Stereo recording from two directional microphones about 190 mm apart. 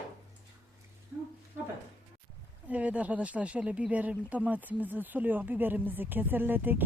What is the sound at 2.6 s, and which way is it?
Speech, 5° right (ahead or behind).